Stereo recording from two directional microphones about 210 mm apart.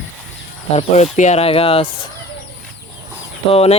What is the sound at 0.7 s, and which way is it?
Speech, 35° left (ahead or behind).